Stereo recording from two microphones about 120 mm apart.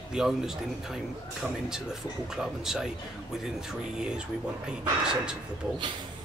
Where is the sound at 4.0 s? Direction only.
5° right (ahead or behind).